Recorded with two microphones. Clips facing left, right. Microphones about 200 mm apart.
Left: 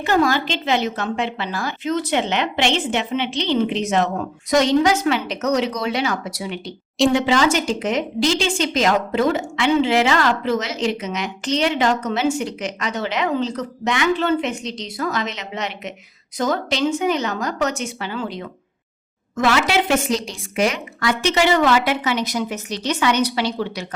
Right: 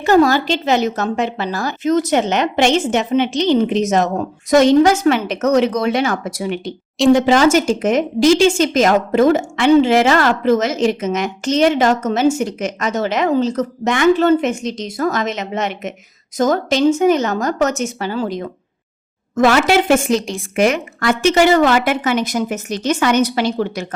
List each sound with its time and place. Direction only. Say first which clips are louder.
0.0 s a woman's voice: right 6 dB; 40° right (ahead or behind)